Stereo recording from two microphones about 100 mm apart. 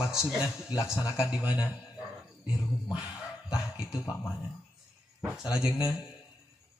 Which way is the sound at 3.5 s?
5° right (ahead or behind).